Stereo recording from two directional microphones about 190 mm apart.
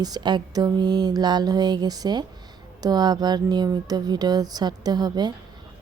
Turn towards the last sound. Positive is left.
turn(degrees=-20)  # may be behind; listen again after turning